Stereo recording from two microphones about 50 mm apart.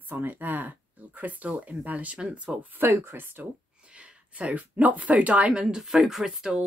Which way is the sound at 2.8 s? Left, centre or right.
Right.